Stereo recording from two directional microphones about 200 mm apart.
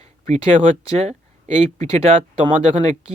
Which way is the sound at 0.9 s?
35° right (ahead or behind).